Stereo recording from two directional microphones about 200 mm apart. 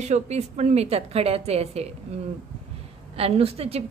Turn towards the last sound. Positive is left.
turn(degrees=-30)  # may be behind; listen again after turning